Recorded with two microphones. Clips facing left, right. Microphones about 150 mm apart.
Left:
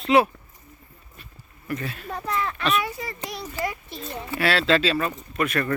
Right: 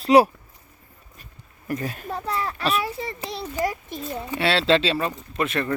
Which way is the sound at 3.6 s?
15° right (ahead or behind).